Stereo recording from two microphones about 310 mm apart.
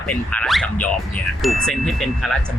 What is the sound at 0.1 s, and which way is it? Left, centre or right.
Speech, centre.